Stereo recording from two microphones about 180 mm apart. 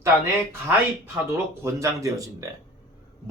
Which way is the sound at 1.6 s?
15° right (ahead or behind).